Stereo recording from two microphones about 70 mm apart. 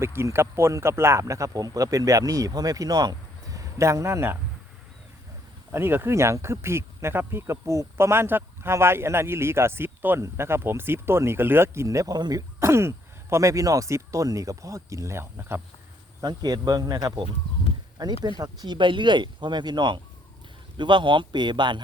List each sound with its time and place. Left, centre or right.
0.0 s speech: right
5.7 s speech: right
10.2 s speech: right
12.1 s speech: right
12.5 s speech: right
13.3 s speech: right
16.2 s speech: right
17.9 s speech: right